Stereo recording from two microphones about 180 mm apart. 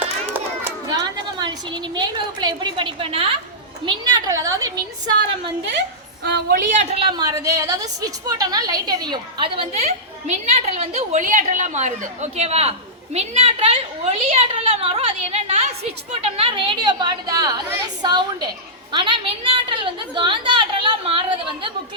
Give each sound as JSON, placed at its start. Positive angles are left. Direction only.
{"t": 0.9, "sound": "a woman's voice", "side_deg": -25}
{"t": 6.2, "sound": "a woman's voice", "side_deg": -70}
{"t": 6.7, "sound": "a woman's voice", "side_deg": -30}